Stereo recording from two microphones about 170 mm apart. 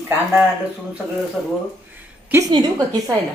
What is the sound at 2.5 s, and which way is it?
Speech, 25° right (ahead or behind).